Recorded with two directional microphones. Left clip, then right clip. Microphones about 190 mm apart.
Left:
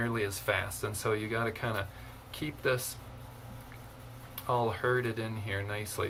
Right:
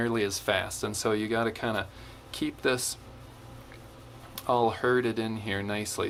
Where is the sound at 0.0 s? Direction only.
55° right (ahead or behind).